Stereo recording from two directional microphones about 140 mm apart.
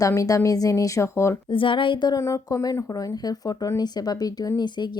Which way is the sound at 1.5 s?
35° left (ahead or behind).